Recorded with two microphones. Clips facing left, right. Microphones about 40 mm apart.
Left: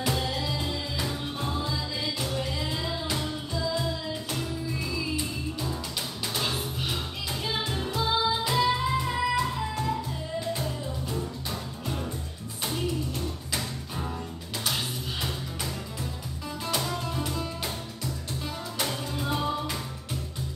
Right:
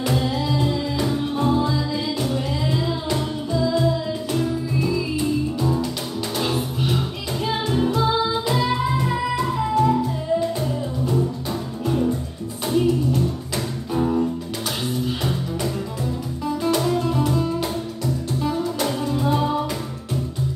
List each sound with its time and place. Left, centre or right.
0.0 s music: centre
11.8 s music: centre
13.9 s music: right
16.4 s music: centre